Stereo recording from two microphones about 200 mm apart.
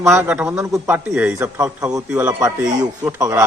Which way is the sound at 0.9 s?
10° right (ahead or behind).